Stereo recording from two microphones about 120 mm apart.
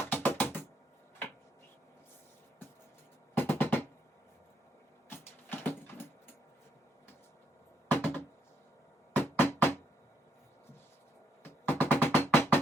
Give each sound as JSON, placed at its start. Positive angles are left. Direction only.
{"t": 0.0, "sound": "music", "side_deg": 20}
{"t": 3.3, "sound": "music", "side_deg": 20}
{"t": 5.0, "sound": "a sound", "side_deg": 20}
{"t": 7.9, "sound": "music", "side_deg": 20}
{"t": 11.4, "sound": "music", "side_deg": 15}